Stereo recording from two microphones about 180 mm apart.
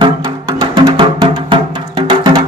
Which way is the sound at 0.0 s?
25° right (ahead or behind).